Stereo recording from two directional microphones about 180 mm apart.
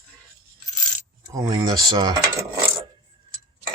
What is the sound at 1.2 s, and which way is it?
Speech, 25° right (ahead or behind).